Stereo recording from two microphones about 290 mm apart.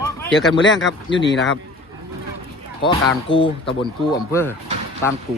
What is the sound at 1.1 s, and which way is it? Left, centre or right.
Speech, left.